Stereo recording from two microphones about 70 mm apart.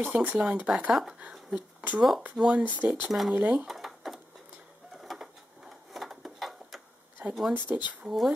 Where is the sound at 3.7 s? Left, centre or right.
Centre.